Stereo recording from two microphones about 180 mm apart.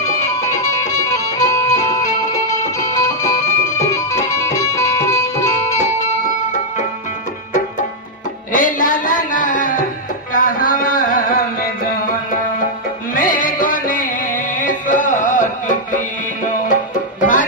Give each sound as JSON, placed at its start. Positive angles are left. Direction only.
{"t": 0.7, "sound": "music", "side_deg": 20}
{"t": 8.5, "sound": "a sound", "side_deg": 45}
{"t": 13.1, "sound": "music", "side_deg": 50}
{"t": 17.2, "sound": "music", "side_deg": 45}